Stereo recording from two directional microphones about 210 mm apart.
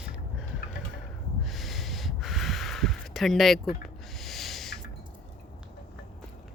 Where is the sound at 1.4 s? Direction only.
Centre (ahead or behind).